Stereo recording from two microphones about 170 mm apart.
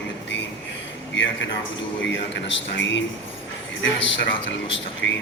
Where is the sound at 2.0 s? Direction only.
90° left.